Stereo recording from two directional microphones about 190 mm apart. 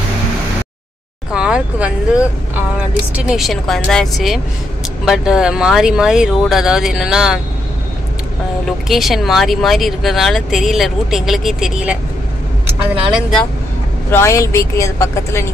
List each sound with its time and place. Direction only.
1.3 s speech: 5° right (ahead or behind)
8.6 s speech: centre (ahead or behind)
12.9 s speech: 25° right (ahead or behind)
14.1 s speech: 15° left (ahead or behind)